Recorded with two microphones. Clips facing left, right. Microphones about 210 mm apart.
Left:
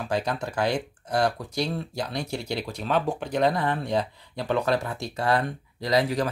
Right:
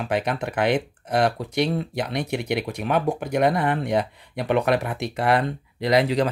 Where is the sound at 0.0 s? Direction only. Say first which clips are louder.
Right 3 dB; 20° right (ahead or behind).